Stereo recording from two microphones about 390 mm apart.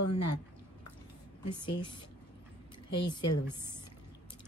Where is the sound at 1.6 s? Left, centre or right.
Centre.